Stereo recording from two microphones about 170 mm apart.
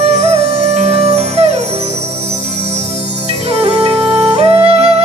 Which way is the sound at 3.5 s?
40° right (ahead or behind).